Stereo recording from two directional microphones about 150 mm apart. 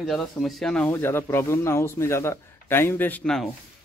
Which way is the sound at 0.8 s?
15° left (ahead or behind).